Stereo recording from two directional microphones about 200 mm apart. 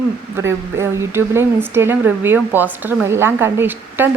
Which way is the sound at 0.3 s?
15° right (ahead or behind).